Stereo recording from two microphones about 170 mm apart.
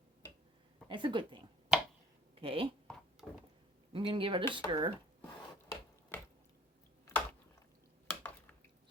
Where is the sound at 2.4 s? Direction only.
35° right (ahead or behind).